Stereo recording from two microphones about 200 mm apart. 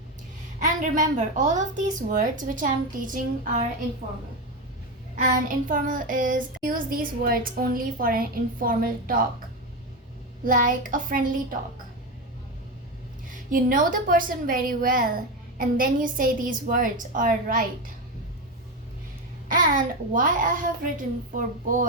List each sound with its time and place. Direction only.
0.6 s a woman's voice: 40° right (ahead or behind)
5.1 s child singing: 45° right (ahead or behind)
10.4 s child singing: 45° right (ahead or behind)
13.5 s child singing: 45° right (ahead or behind)
19.5 s child singing: 45° right (ahead or behind)